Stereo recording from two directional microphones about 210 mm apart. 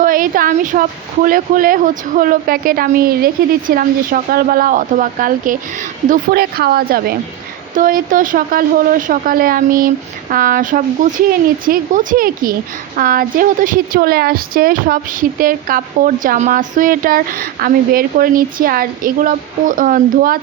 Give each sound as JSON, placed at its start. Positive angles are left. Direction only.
{"t": 0.0, "sound": "a woman's voice", "side_deg": -40}